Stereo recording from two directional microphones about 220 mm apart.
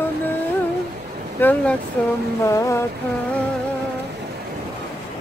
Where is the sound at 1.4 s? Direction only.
5° left (ahead or behind).